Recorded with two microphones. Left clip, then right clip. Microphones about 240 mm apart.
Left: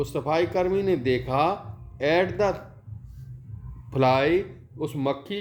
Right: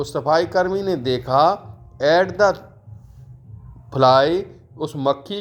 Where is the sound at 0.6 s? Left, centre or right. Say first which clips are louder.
Right 2 dB; centre.